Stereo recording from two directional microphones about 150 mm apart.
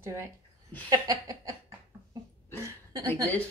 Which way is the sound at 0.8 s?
25° right (ahead or behind).